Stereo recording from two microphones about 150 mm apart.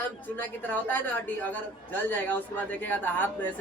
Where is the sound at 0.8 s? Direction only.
10° left (ahead or behind).